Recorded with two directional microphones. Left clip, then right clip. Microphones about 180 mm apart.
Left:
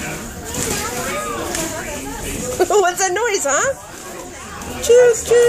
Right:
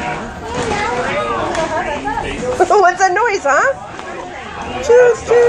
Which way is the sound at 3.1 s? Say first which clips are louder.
Right 5 dB; 20° left (ahead or behind).